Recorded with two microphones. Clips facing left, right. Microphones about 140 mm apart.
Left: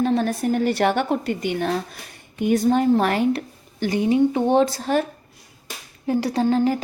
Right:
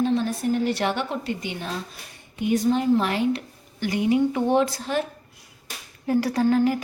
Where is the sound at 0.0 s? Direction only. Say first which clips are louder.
Left 2 dB; 55° left (ahead or behind).